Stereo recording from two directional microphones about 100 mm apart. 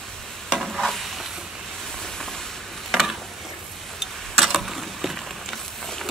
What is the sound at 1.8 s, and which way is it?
Sizzle, 5° left (ahead or behind).